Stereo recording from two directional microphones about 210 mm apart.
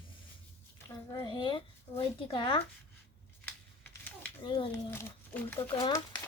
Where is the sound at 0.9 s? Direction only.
20° left (ahead or behind).